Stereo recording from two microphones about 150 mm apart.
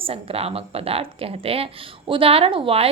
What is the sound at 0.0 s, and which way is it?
Speech, 40° right (ahead or behind).